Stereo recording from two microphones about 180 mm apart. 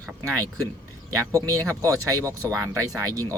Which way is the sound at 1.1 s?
20° right (ahead or behind).